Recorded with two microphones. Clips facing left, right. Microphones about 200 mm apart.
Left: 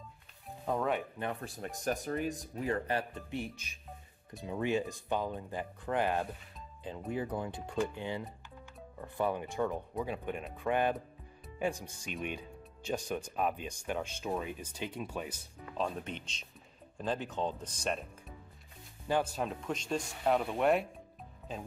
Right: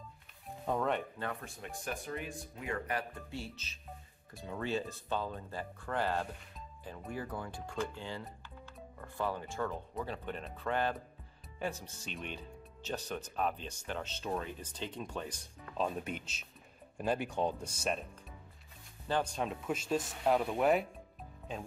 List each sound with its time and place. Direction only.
0.7 s speech: 5° left (ahead or behind)
1.4 s speech: 40° left (ahead or behind); by 15.9 s 5° left (ahead or behind)
16.0 s speech: 5° right (ahead or behind)
19.0 s speech: 10° left (ahead or behind)